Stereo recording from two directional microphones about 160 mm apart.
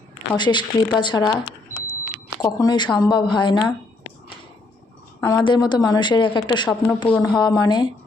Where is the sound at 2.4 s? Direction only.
25° left (ahead or behind).